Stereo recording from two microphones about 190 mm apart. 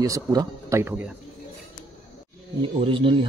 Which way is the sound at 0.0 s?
20° right (ahead or behind).